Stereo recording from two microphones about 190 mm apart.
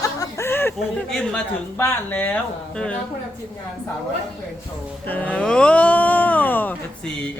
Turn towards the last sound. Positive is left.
turn(degrees=10)  # may be behind; listen again after turning